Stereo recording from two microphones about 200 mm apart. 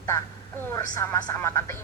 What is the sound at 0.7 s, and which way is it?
A woman's voice, 15° left (ahead or behind).